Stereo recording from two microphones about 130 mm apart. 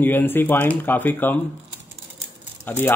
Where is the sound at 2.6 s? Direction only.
15° left (ahead or behind).